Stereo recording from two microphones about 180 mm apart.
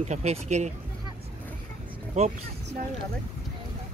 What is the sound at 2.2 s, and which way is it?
Speech, 35° right (ahead or behind).